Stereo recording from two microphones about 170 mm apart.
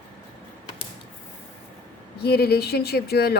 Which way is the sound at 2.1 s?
70° left (ahead or behind).